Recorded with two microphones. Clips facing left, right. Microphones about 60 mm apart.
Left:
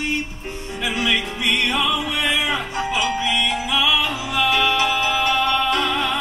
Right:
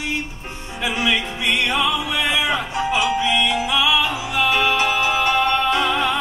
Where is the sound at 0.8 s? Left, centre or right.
Centre.